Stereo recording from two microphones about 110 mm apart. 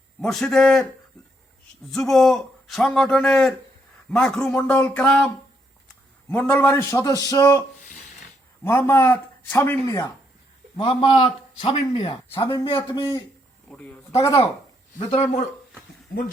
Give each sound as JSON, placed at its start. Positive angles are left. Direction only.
{"t": 0.2, "sound": "a man's voice", "side_deg": 5}
{"t": 1.9, "sound": "a man's voice", "side_deg": 0}
{"t": 6.5, "sound": "a man's voice", "side_deg": 20}
{"t": 8.6, "sound": "a man's voice", "side_deg": 20}
{"t": 9.8, "sound": "a man's voice", "side_deg": 30}
{"t": 10.8, "sound": "speech", "side_deg": 55}
{"t": 12.5, "sound": "a man's voice", "side_deg": 45}
{"t": 13.7, "sound": "speech", "side_deg": 10}
{"t": 14.2, "sound": "speech", "side_deg": 30}
{"t": 14.9, "sound": "speech", "side_deg": 85}